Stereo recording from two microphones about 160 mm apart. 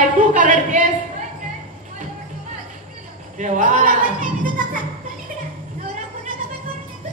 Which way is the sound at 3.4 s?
55° right (ahead or behind).